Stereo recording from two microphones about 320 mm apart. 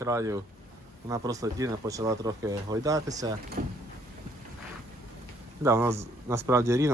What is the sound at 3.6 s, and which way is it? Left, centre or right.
Speech, right.